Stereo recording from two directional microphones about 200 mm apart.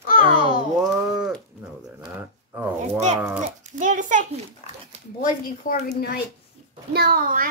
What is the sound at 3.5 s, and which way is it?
Speech, 40° right (ahead or behind).